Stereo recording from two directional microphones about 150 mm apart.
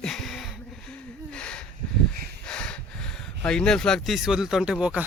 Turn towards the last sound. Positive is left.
turn(degrees=-5)  # may be behind; listen again after turning